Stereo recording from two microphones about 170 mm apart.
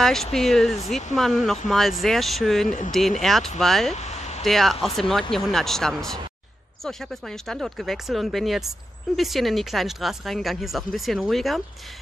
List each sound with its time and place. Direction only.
0.0 s speech: centre (ahead or behind)
3.9 s a sound: 40° left (ahead or behind)
4.4 s speech: centre (ahead or behind)